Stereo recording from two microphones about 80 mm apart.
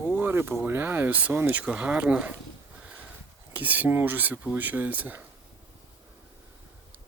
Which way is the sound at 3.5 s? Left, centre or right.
Right.